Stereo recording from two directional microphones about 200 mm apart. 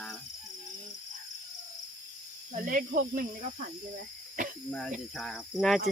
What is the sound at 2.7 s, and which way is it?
Speech, 40° right (ahead or behind).